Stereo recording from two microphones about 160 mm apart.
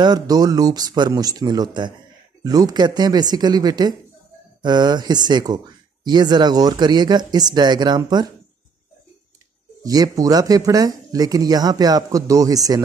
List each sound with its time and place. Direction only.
0.0 s speech: 25° right (ahead or behind)
9.8 s speech: 20° right (ahead or behind)